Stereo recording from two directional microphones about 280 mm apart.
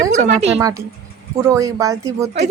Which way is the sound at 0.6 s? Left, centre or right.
Centre.